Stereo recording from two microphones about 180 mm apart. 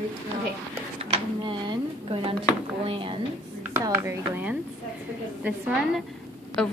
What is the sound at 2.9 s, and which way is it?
Speech, 30° right (ahead or behind).